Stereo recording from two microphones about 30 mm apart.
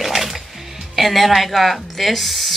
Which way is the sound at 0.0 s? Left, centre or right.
Centre.